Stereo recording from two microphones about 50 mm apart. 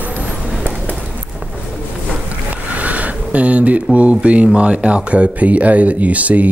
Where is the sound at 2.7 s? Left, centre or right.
Right.